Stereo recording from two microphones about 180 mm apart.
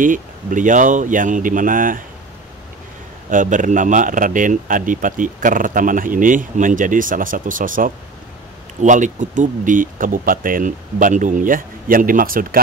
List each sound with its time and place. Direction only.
0.0 s speech: 45° right (ahead or behind)
3.3 s speech: 45° right (ahead or behind)